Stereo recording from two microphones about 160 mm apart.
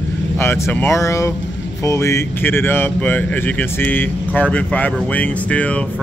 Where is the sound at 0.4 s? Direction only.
15° left (ahead or behind).